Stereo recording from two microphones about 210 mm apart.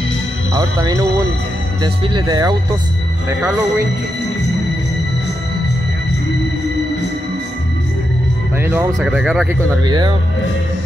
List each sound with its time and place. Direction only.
0.6 s speech: 20° right (ahead or behind)
8.5 s speech: 10° right (ahead or behind)
9.8 s speech: 20° right (ahead or behind)